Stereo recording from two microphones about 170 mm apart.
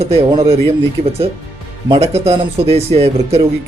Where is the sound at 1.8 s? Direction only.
30° right (ahead or behind).